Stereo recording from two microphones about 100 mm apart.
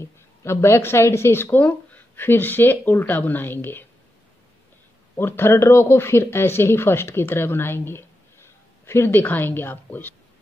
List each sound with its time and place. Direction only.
0.0 s speech: 30° left (ahead or behind)
5.1 s speech: 25° left (ahead or behind)